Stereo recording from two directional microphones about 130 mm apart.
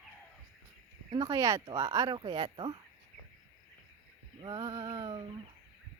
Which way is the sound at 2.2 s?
35° right (ahead or behind).